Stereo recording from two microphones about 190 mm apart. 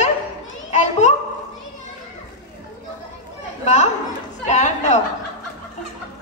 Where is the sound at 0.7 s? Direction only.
35° left (ahead or behind).